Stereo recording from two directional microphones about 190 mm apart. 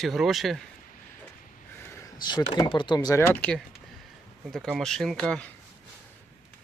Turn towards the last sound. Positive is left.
turn(degrees=5)  # may be behind; listen again after turning